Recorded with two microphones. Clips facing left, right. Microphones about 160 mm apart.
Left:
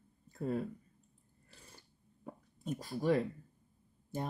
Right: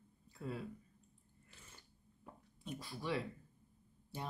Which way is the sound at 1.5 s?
35° left (ahead or behind).